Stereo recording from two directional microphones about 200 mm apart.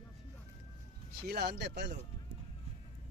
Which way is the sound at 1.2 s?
55° right (ahead or behind).